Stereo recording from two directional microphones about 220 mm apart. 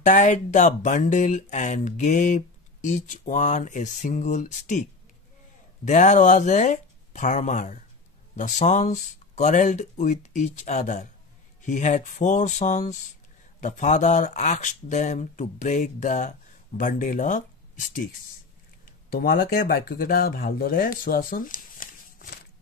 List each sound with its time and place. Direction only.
0.0 s speech: 35° left (ahead or behind)
5.9 s speech: 35° left (ahead or behind)
19.0 s speech: 45° left (ahead or behind)